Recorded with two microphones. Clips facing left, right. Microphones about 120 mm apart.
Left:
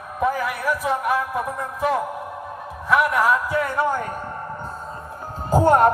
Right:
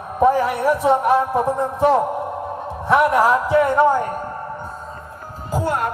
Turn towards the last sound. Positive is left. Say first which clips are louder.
# left 6 dB
turn(degrees=45)  # may be behind; listen again after turning